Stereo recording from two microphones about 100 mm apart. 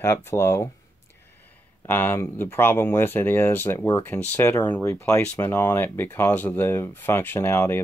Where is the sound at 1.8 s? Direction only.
20° left (ahead or behind).